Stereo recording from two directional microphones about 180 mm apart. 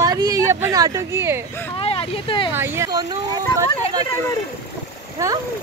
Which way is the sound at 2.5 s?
15° right (ahead or behind).